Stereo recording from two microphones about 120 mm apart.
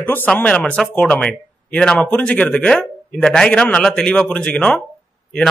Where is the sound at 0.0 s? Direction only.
15° left (ahead or behind).